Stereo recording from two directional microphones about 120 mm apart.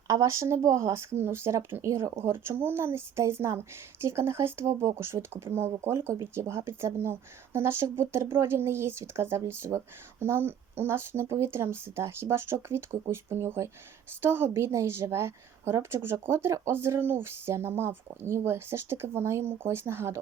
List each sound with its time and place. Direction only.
0.1 s speech: 25° right (ahead or behind)